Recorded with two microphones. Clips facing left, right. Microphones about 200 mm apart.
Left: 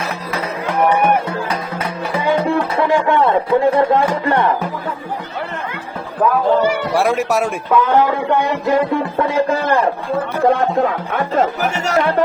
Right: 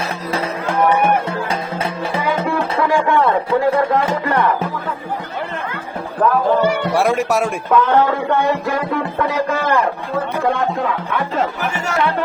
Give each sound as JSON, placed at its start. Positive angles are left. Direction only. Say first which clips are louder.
{"t": 0.8, "sound": "music", "louder": "left 1 dB", "side_deg": 25}
{"t": 1.3, "sound": "music", "louder": "even", "side_deg": -25}
{"t": 2.7, "sound": "a sound", "louder": "even", "side_deg": 25}
{"t": 3.8, "sound": "music", "louder": "left 2 dB", "side_deg": 25}
{"t": 6.2, "sound": "speech", "louder": "left 1 dB", "side_deg": 10}